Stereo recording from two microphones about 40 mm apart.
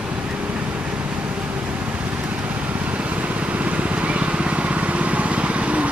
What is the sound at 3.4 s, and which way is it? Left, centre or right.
Vehicle, right.